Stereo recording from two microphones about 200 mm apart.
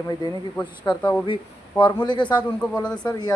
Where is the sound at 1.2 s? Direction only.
25° left (ahead or behind).